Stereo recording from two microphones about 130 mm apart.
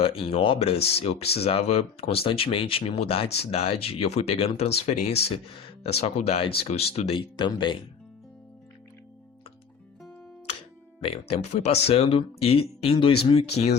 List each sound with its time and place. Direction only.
0.0 s speech: 45° left (ahead or behind)
7.2 s speech: 35° left (ahead or behind)
11.0 s speech: 50° left (ahead or behind)